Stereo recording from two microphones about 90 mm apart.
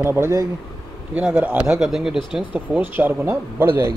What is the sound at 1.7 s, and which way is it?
Speech, 5° right (ahead or behind).